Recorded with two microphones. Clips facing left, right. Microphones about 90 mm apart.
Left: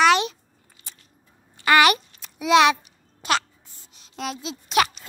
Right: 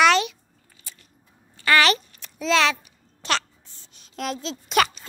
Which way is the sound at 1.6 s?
15° left (ahead or behind).